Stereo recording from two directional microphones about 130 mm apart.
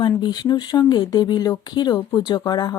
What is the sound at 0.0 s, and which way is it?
Speech, 35° left (ahead or behind).